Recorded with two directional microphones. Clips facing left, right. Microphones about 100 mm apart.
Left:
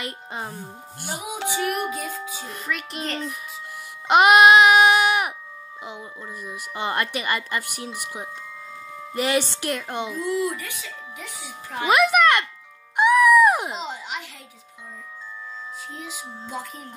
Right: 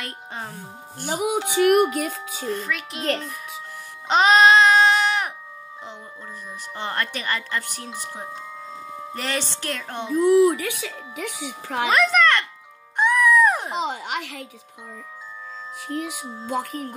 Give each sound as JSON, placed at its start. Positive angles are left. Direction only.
{"t": 0.0, "sound": "speech", "side_deg": 5}
{"t": 1.0, "sound": "speech", "side_deg": -55}
{"t": 2.4, "sound": "music", "side_deg": 0}
{"t": 4.1, "sound": "a sound", "side_deg": 10}
{"t": 6.4, "sound": "speech", "side_deg": 10}
{"t": 10.4, "sound": "speech", "side_deg": -65}
{"t": 11.9, "sound": "a child's voice", "side_deg": 15}
{"t": 12.9, "sound": "music", "side_deg": 10}
{"t": 13.7, "sound": "speech", "side_deg": -60}
{"t": 15.9, "sound": "speech", "side_deg": -60}